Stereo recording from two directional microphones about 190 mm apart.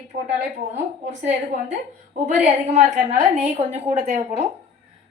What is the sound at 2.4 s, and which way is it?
Speech, 40° right (ahead or behind).